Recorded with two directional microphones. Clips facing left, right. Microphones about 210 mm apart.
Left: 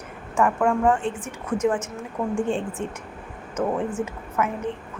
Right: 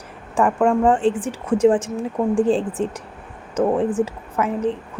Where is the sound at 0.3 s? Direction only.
30° right (ahead or behind).